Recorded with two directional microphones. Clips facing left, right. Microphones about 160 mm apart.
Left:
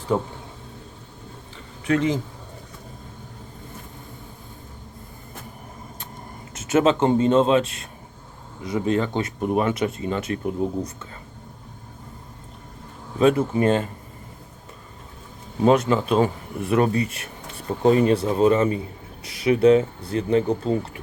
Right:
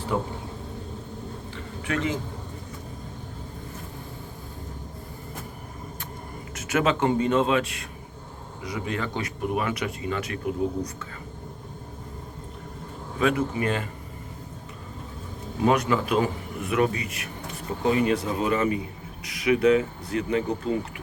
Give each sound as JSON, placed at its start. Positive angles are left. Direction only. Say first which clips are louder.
{"t": 0.1, "sound": "speech", "louder": "left 4 dB", "side_deg": 30}
{"t": 1.9, "sound": "speech", "louder": "left 6 dB", "side_deg": 20}
{"t": 6.5, "sound": "speech", "louder": "left 5 dB", "side_deg": 25}
{"t": 13.1, "sound": "speech", "louder": "left 6 dB", "side_deg": 30}
{"t": 15.6, "sound": "speech", "louder": "left 4 dB", "side_deg": 30}